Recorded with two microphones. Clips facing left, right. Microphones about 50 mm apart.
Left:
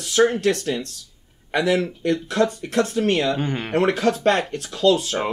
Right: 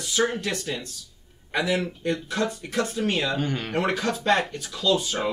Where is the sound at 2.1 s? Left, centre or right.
Left.